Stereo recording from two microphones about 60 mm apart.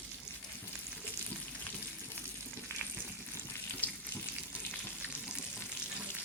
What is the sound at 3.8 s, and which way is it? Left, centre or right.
Frying, left.